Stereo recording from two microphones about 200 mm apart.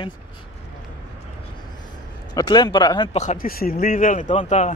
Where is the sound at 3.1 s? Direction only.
35° left (ahead or behind).